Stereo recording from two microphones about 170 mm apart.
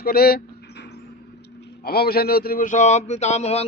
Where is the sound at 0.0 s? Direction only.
60° left (ahead or behind).